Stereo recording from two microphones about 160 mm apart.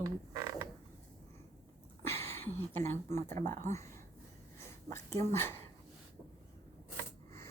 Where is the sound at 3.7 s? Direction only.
20° left (ahead or behind).